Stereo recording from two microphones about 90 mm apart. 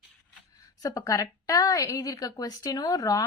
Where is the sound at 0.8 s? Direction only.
40° left (ahead or behind).